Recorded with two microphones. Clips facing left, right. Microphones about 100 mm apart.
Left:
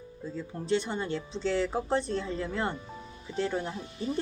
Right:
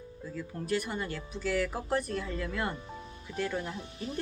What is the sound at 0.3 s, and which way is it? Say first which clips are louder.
Speech: left 3 dB; 25° left (ahead or behind).